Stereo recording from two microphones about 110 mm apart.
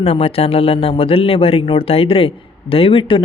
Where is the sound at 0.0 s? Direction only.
60° left (ahead or behind).